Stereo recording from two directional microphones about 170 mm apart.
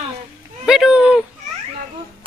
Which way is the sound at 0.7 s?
5° right (ahead or behind).